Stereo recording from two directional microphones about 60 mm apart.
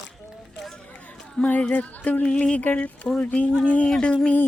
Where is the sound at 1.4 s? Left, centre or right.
Left.